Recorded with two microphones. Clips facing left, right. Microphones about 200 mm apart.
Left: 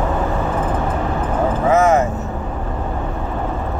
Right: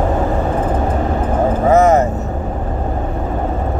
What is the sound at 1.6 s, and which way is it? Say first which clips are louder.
Vehicle: right 3 dB; 35° right (ahead or behind).